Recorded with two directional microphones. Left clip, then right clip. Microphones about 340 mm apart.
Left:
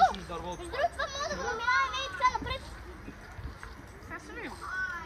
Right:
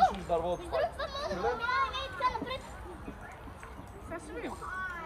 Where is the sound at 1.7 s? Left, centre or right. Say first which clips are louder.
Left 3 dB; left.